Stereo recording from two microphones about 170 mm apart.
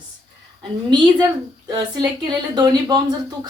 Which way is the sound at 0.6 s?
25° right (ahead or behind).